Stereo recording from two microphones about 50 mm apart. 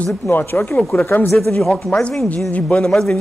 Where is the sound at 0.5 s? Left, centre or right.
Left.